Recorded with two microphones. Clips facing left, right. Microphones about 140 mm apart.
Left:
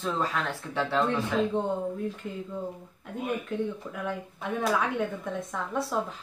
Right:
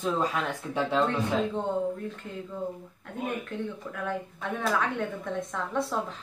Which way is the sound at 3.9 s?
10° left (ahead or behind).